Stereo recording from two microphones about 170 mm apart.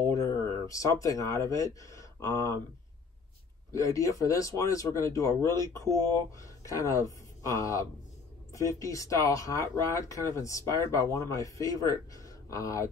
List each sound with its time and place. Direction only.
0.0 s speech: 20° left (ahead or behind)
3.7 s speech: 20° left (ahead or behind)